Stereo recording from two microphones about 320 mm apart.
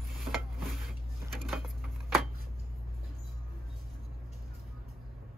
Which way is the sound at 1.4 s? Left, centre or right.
Centre.